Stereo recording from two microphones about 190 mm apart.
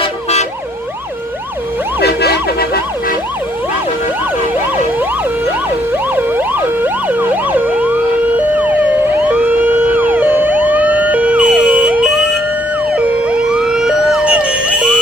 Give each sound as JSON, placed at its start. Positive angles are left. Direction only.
{"t": 0.0, "sound": "emergency vehicle", "side_deg": 35}
{"t": 2.0, "sound": "emergency vehicle", "side_deg": 60}
{"t": 5.9, "sound": "emergency vehicle", "side_deg": -10}
{"t": 13.2, "sound": "emergency vehicle", "side_deg": -5}